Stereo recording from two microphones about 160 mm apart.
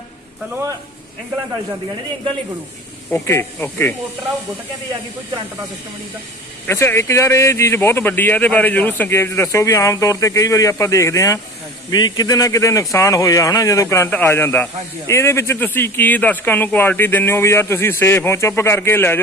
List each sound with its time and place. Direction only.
3.1 s speech: 15° left (ahead or behind)
6.7 s speech: 15° left (ahead or behind)